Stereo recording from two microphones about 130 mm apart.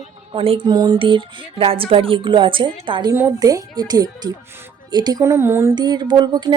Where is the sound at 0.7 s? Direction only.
35° right (ahead or behind); by 5.7 s 20° right (ahead or behind).